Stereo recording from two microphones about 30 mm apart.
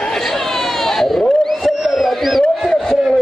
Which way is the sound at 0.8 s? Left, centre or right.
Centre.